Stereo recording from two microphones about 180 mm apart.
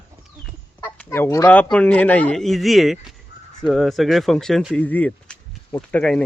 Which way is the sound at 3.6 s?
Centre (ahead or behind).